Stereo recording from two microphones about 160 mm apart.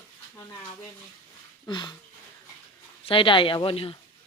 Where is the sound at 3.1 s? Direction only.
30° left (ahead or behind).